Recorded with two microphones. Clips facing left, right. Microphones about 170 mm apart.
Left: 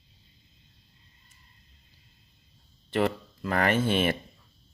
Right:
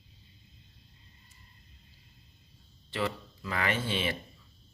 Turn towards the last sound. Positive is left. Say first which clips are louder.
# left 7 dB
turn(degrees=50)  # may be behind; listen again after turning